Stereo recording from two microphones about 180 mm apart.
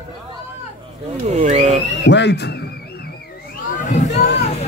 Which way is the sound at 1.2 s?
40° right (ahead or behind).